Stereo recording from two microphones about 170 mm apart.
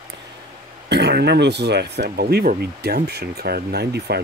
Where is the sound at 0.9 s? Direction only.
75° right (ahead or behind).